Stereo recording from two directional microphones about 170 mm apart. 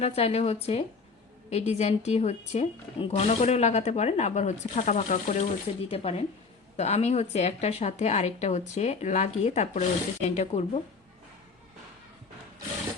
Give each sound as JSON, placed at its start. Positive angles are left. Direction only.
{"t": 0.0, "sound": "speech", "side_deg": 35}